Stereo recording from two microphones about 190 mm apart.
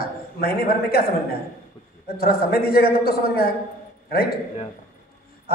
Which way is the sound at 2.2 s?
55° left (ahead or behind).